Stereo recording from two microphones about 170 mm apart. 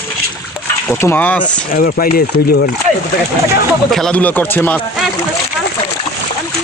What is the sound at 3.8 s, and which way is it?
Speech, centre (ahead or behind).